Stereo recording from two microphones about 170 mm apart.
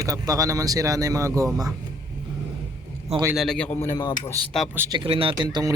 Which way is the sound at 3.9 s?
25° left (ahead or behind).